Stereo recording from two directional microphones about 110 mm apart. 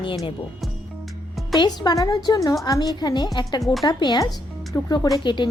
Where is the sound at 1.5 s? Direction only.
40° left (ahead or behind).